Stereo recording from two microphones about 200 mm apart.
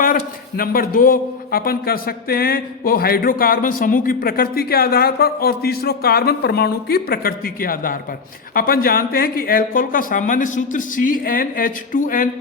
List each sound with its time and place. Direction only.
0.0 s a man's voice: 45° left (ahead or behind)